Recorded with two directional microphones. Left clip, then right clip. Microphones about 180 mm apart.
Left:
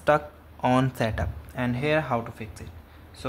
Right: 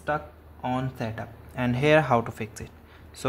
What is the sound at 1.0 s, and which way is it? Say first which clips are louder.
Speech: left 6 dB; 10° left (ahead or behind).